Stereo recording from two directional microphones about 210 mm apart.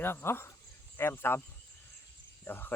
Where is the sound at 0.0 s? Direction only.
10° left (ahead or behind).